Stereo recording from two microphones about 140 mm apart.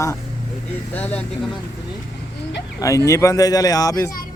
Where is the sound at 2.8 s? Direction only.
20° left (ahead or behind).